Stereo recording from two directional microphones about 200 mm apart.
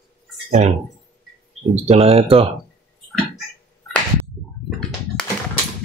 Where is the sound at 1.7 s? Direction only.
30° right (ahead or behind).